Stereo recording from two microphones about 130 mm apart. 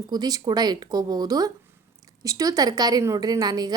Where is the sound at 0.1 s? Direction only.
30° right (ahead or behind).